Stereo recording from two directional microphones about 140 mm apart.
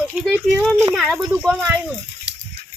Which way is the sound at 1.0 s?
10° right (ahead or behind).